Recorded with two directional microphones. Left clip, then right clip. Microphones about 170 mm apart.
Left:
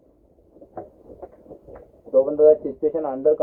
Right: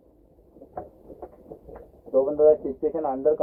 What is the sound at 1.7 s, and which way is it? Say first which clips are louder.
Speech: left 4 dB; 35° left (ahead or behind).